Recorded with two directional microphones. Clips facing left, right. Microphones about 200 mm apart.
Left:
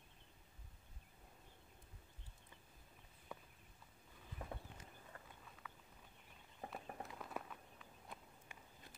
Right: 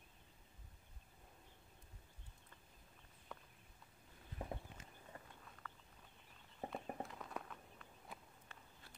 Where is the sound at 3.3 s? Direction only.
5° left (ahead or behind).